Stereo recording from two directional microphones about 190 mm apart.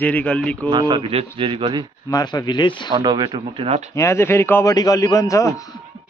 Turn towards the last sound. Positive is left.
turn(degrees=15)  # may be behind; listen again after turning